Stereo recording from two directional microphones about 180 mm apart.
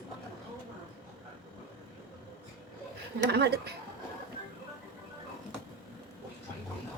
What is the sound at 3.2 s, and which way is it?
Speech, 65° right (ahead or behind).